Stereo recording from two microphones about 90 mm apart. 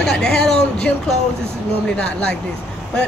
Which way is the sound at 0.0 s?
5° left (ahead or behind).